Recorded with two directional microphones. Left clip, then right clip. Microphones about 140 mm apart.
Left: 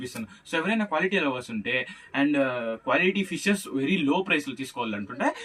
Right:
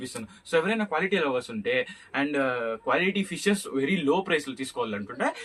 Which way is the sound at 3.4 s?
25° right (ahead or behind).